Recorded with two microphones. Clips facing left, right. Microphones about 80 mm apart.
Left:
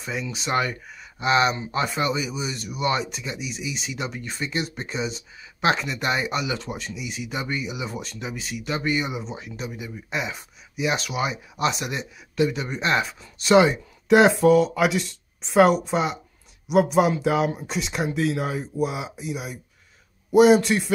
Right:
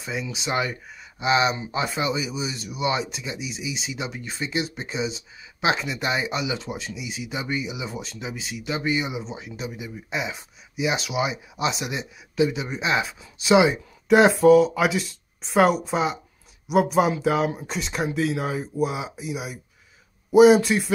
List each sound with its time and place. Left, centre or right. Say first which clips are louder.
0.0 s speech: even; centre